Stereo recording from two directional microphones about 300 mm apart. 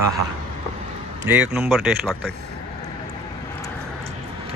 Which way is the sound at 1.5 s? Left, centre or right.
Centre.